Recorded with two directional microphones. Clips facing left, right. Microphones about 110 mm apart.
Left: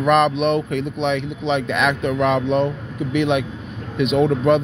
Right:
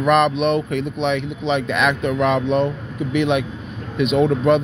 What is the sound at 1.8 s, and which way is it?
Speech, 40° left (ahead or behind).